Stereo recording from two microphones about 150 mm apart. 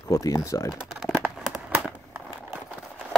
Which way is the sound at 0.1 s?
20° left (ahead or behind).